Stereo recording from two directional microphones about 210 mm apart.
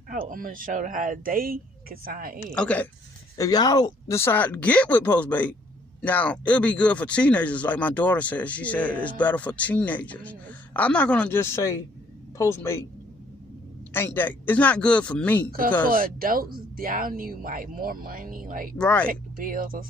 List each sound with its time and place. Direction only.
0.1 s speech: 40° right (ahead or behind)
2.5 s speech: 5° left (ahead or behind)
3.3 s speech: 20° left (ahead or behind)
13.9 s speech: 10° left (ahead or behind)
15.9 s speech: 45° right (ahead or behind)
18.8 s speech: 5° left (ahead or behind)
19.3 s speech: 40° right (ahead or behind)